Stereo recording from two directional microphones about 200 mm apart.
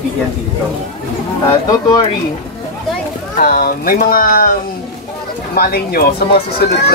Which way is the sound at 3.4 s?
40° left (ahead or behind).